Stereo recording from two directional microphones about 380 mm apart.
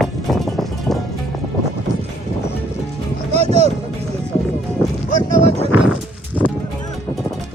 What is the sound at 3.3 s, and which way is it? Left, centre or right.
Music, centre.